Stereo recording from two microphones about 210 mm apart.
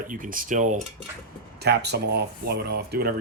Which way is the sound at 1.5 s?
50° right (ahead or behind).